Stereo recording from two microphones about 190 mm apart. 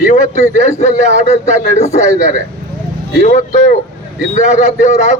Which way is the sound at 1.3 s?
35° left (ahead or behind).